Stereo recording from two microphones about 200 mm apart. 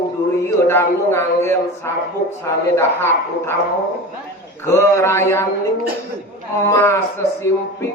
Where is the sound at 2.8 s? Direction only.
10° left (ahead or behind).